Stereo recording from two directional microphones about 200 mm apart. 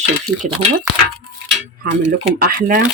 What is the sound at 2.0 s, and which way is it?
Speech, 50° right (ahead or behind).